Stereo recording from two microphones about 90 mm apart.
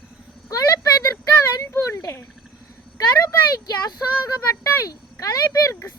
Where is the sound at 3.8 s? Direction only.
40° left (ahead or behind).